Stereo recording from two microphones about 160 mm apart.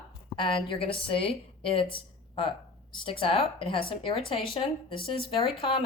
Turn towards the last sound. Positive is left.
turn(degrees=35)  # may be behind; listen again after turning